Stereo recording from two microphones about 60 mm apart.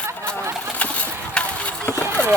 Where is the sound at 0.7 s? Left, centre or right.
Left.